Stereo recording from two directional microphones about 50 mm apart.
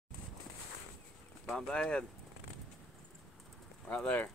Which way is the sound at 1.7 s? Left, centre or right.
Centre.